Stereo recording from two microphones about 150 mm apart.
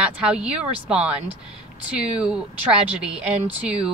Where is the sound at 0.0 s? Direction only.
5° right (ahead or behind).